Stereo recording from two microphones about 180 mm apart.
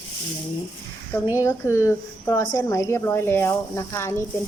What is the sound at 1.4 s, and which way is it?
A woman's voice, 15° left (ahead or behind).